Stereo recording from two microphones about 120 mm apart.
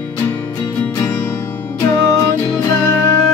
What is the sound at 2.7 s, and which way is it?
Music, 10° left (ahead or behind).